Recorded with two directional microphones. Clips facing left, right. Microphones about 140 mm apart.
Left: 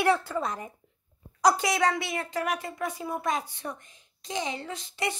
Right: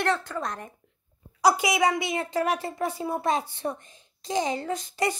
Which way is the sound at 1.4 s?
10° right (ahead or behind).